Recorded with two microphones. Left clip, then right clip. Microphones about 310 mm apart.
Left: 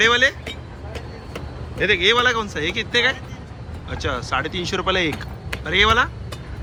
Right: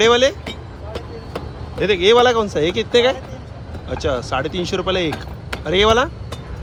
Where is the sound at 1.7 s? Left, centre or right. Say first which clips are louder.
Right 4 dB; centre.